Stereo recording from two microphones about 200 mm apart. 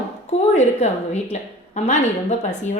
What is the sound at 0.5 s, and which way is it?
A woman's voice, 35° left (ahead or behind).